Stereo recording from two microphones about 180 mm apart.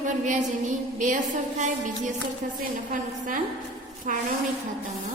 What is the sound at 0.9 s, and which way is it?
Speech, 45° right (ahead or behind).